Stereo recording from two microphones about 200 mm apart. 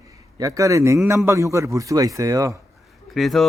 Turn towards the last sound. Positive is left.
turn(degrees=0)  # may be behind; listen again after turning